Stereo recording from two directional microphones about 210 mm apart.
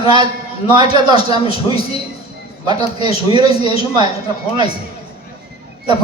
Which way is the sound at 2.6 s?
20° right (ahead or behind).